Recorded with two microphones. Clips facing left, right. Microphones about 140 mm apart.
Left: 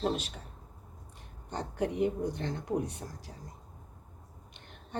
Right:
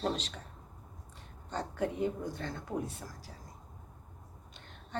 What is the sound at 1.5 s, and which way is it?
Speech, 15° left (ahead or behind).